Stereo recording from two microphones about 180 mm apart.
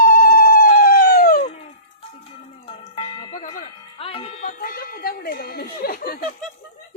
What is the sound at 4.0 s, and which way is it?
Music, 30° left (ahead or behind).